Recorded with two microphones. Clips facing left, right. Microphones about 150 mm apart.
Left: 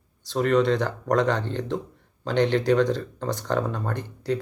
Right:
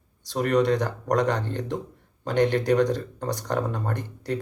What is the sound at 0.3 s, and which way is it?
Speech, 10° right (ahead or behind).